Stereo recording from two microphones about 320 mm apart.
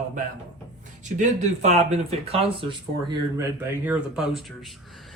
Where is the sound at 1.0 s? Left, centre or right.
Right.